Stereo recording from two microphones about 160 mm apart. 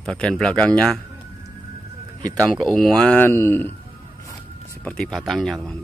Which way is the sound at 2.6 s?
5° left (ahead or behind).